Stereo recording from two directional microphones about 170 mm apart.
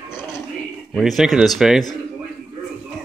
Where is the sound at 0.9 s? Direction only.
Centre (ahead or behind).